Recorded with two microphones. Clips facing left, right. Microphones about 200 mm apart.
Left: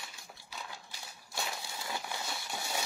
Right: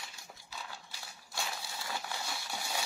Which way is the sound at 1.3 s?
20° left (ahead or behind).